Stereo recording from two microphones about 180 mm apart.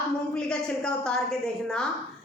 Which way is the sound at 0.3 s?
5° left (ahead or behind).